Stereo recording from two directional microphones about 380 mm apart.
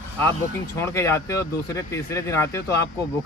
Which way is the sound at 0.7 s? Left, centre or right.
Centre.